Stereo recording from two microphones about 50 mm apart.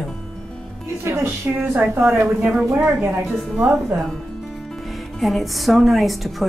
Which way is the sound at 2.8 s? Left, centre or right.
Centre.